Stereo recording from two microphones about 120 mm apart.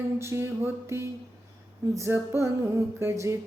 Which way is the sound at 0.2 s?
20° right (ahead or behind).